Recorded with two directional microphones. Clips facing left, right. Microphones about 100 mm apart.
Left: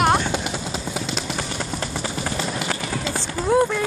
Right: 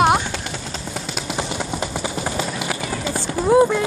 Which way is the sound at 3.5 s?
5° right (ahead or behind).